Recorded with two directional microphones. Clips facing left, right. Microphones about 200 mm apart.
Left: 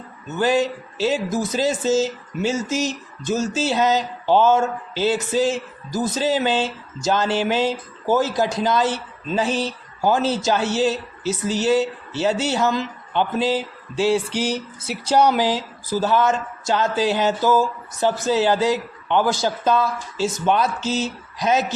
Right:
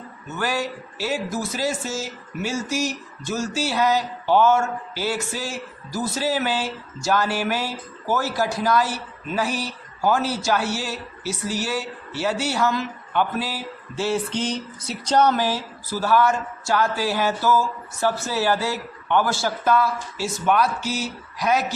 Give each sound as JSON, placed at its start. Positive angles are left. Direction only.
{"t": 0.3, "sound": "speech", "side_deg": 20}